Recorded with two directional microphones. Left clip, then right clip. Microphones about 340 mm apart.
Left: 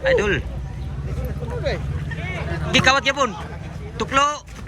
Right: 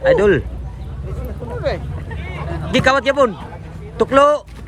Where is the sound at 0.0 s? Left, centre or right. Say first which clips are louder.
Right 6 dB; centre.